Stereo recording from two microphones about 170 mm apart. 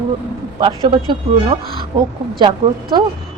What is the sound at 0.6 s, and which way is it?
A woman's voice, 30° right (ahead or behind).